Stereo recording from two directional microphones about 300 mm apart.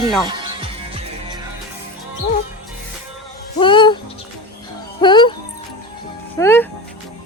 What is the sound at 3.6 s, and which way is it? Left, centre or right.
Speech, centre.